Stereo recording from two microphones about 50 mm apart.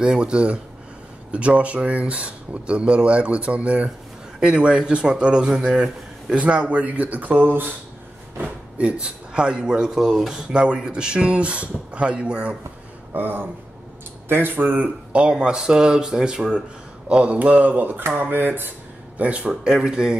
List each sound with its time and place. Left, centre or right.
0.0 s speech: centre
6.4 s speech: right
8.7 s speech: right
13.1 s speech: right
15.1 s speech: centre; by 18.7 s right
19.1 s speech: right